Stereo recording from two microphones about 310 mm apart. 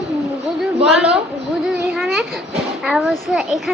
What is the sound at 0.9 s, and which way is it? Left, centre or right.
Child singing, centre.